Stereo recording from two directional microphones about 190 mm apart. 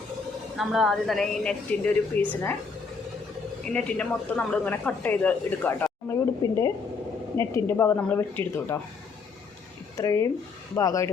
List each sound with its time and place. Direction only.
0.5 s speech: centre (ahead or behind)
3.7 s speech: 5° left (ahead or behind)
10.0 s speech: 20° left (ahead or behind)